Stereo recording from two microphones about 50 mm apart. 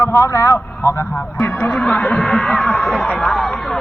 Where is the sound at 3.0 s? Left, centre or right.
Left.